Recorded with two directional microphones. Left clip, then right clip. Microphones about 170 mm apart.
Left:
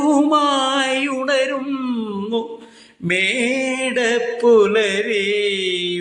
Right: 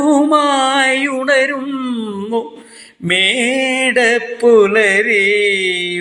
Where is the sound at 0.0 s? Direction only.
15° right (ahead or behind).